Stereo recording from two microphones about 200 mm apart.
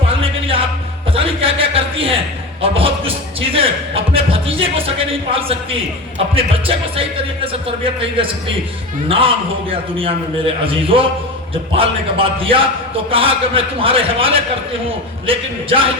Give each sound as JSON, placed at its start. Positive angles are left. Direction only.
{"t": 0.1, "sound": "music", "side_deg": -30}
{"t": 1.1, "sound": "a sound", "side_deg": -30}
{"t": 6.3, "sound": "music", "side_deg": -30}
{"t": 8.2, "sound": "a man's voice", "side_deg": -25}